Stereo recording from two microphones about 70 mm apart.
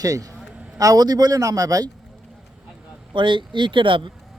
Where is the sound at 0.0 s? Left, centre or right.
Right.